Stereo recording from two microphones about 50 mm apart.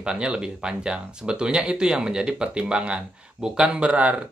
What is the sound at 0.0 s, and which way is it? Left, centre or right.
Speech, centre.